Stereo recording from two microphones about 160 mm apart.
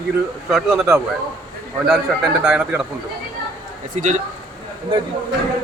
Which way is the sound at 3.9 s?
50° right (ahead or behind).